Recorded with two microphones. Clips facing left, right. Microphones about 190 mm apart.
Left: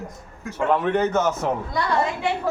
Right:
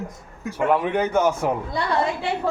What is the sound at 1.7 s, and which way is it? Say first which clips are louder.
Speech: even; 30° right (ahead or behind).